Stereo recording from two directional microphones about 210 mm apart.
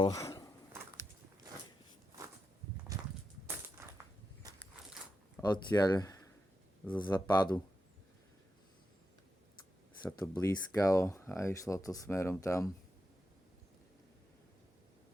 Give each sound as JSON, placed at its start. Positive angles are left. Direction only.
{"t": 0.0, "sound": "speech", "side_deg": 15}
{"t": 2.9, "sound": "walk", "side_deg": -15}
{"t": 4.4, "sound": "a sound", "side_deg": -20}
{"t": 5.4, "sound": "speech", "side_deg": 20}
{"t": 10.1, "sound": "speech", "side_deg": 15}